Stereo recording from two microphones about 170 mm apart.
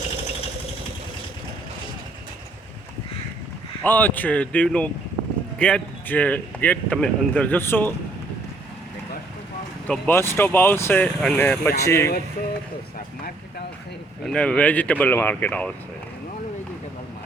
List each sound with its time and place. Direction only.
3.8 s speech: 10° left (ahead or behind)
9.8 s speech: 10° left (ahead or behind)
14.3 s speech: 5° left (ahead or behind)